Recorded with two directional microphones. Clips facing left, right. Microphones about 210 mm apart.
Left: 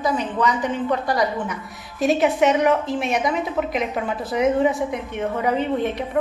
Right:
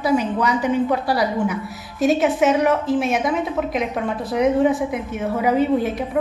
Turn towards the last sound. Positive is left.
turn(degrees=-5)  # may be behind; listen again after turning